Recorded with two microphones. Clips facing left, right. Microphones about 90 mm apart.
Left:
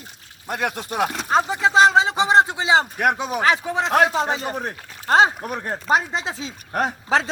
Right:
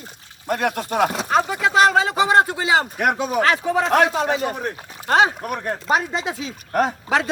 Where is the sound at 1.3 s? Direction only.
25° left (ahead or behind).